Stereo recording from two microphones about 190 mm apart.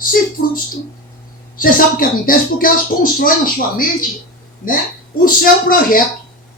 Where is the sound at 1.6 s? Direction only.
50° left (ahead or behind).